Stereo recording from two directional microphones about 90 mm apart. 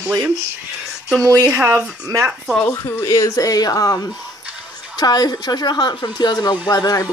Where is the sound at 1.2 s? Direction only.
35° right (ahead or behind).